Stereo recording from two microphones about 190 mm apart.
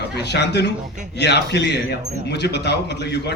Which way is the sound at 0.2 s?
60° left (ahead or behind).